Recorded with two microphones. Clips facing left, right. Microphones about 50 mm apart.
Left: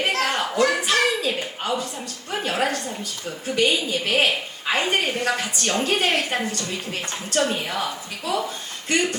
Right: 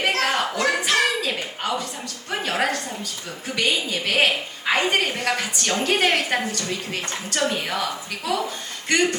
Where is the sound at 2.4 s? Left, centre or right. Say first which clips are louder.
Even; right.